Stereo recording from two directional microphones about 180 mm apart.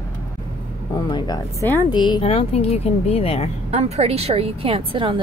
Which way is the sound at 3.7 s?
35° right (ahead or behind).